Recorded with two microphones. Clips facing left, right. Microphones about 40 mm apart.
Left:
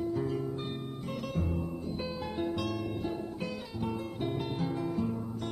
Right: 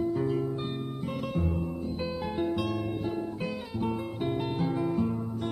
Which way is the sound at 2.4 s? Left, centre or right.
Centre.